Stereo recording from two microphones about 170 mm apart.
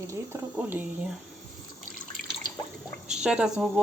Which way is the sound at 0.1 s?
15° right (ahead or behind).